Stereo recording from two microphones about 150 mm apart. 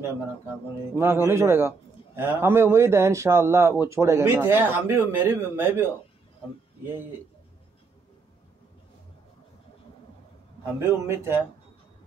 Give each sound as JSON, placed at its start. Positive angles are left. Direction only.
{"t": 0.9, "sound": "speech", "side_deg": -15}
{"t": 6.9, "sound": "speech", "side_deg": -15}
{"t": 10.6, "sound": "speech", "side_deg": -15}